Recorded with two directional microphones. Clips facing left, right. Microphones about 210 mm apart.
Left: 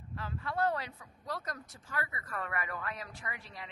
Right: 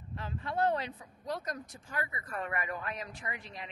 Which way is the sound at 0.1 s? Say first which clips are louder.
Right 1 dB; 20° right (ahead or behind).